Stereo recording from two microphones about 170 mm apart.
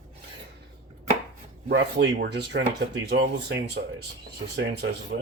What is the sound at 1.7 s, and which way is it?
Speech, 85° right.